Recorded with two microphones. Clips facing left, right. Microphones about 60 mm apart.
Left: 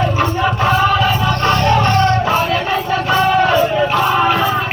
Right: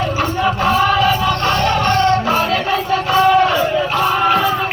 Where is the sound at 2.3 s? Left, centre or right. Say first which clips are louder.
Even; left.